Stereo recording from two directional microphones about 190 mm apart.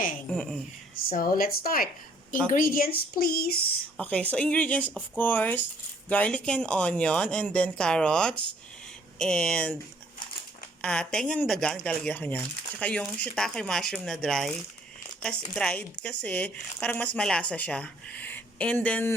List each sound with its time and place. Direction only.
0.3 s speech: centre (ahead or behind)
1.1 s speech: 50° left (ahead or behind)
3.9 s speech: 5° left (ahead or behind)
10.8 s speech: 5° left (ahead or behind)